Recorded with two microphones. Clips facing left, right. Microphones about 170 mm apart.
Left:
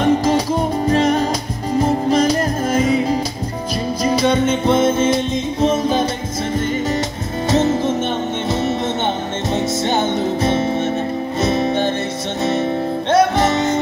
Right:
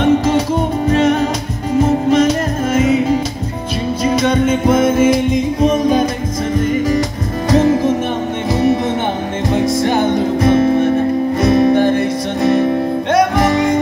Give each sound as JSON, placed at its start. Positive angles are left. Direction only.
{"t": 0.0, "sound": "music", "side_deg": 35}